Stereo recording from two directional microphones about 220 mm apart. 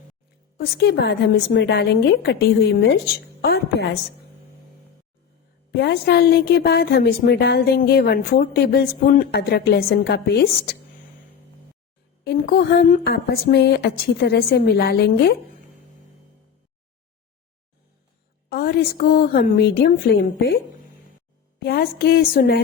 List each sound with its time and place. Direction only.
0.5 s a woman's voice: 50° left (ahead or behind)
5.7 s a woman's voice: 45° left (ahead or behind)
12.2 s a woman's voice: 45° left (ahead or behind)
18.4 s a woman's voice: 45° left (ahead or behind)
21.6 s a woman's voice: 45° left (ahead or behind)